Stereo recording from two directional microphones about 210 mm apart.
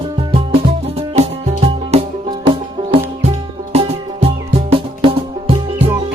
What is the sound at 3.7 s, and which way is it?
Music, 30° right (ahead or behind).